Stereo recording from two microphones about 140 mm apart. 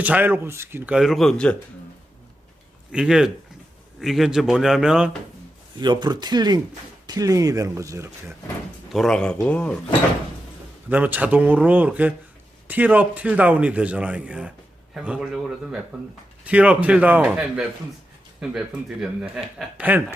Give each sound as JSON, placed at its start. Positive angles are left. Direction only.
{"t": 0.0, "sound": "a man's voice", "side_deg": -10}
{"t": 0.9, "sound": "speech", "side_deg": 0}
{"t": 2.9, "sound": "speech", "side_deg": -5}
{"t": 5.8, "sound": "speech", "side_deg": -30}
{"t": 8.9, "sound": "speech", "side_deg": 5}
{"t": 10.8, "sound": "a man's voice", "side_deg": -10}